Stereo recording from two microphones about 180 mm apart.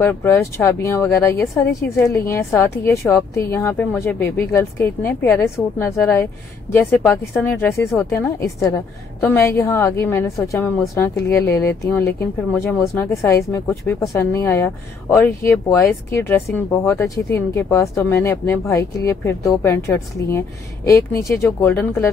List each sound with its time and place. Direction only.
0.0 s speech: 15° left (ahead or behind)